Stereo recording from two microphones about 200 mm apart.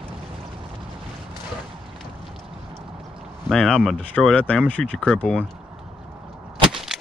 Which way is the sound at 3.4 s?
5° left (ahead or behind).